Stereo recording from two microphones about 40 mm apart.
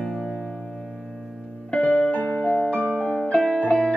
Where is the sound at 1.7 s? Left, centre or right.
Left.